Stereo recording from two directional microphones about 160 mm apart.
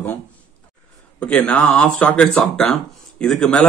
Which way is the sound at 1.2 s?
10° left (ahead or behind).